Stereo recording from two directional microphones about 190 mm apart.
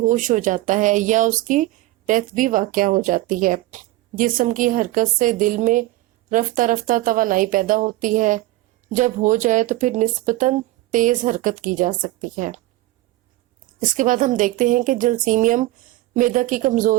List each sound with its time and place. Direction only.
0.0 s speech: 45° right (ahead or behind)
13.7 s speech: 45° right (ahead or behind)